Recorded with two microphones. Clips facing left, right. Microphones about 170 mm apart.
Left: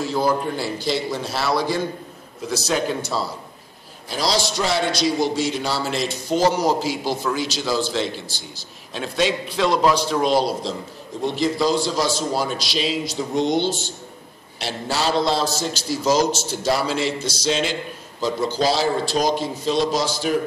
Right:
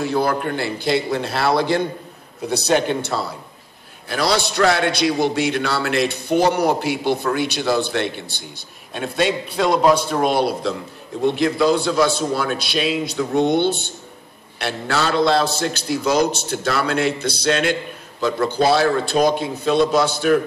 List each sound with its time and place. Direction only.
0.0 s a man's voice: 60° right (ahead or behind)